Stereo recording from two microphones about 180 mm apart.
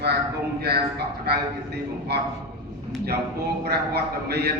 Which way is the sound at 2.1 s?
65° right (ahead or behind).